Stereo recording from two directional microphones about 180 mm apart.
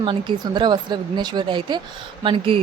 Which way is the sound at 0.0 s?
25° right (ahead or behind).